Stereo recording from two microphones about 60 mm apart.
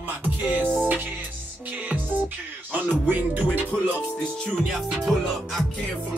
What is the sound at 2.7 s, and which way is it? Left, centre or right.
Music, right.